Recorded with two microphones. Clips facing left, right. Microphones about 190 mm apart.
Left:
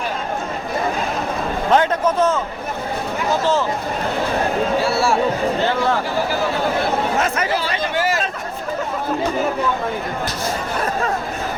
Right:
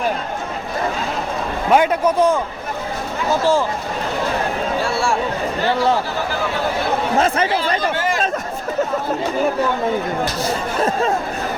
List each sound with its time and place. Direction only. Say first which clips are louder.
1.7 s a man's voice: right 2 dB; 10° right (ahead or behind)
4.8 s speech: left 2 dB; 5° left (ahead or behind)
7.2 s speech: right 3 dB; 30° right (ahead or behind)
7.9 s a sound: left 1 dB; 5° left (ahead or behind)